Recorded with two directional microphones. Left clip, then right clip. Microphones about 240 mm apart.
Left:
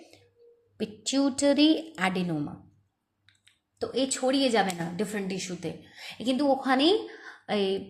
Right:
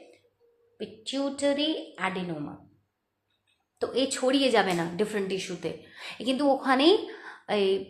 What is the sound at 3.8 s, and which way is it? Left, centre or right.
A woman's voice, left.